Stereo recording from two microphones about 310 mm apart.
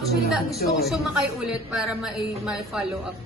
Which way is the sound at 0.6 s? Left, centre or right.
Left.